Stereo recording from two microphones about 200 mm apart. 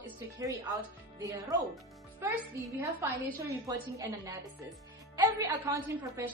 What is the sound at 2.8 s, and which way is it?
A woman's voice, 15° right (ahead or behind).